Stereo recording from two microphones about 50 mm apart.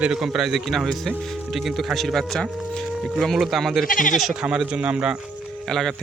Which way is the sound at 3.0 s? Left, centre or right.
Centre.